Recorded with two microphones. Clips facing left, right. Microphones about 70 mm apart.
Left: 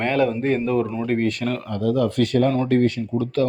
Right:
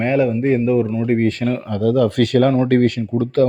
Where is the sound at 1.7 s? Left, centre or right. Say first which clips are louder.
Right 4 dB; right.